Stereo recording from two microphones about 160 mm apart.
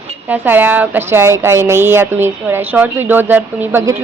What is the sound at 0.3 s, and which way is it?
A woman's voice, 10° right (ahead or behind).